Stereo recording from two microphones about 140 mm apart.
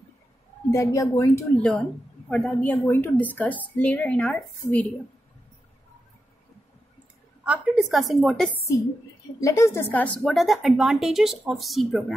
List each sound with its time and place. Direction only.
0.7 s a woman's voice: 20° left (ahead or behind)
1.6 s a woman's voice: 5° left (ahead or behind)
7.4 s speech: 10° right (ahead or behind)
9.4 s a woman's voice: 20° left (ahead or behind)
10.3 s speech: centre (ahead or behind)